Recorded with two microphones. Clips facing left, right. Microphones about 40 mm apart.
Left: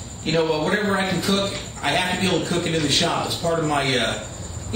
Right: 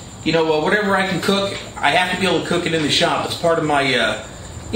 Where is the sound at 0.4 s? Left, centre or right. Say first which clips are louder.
Right 4 dB; centre.